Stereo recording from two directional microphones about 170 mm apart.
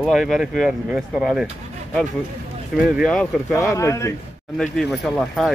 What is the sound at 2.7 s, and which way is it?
Speech, 5° right (ahead or behind).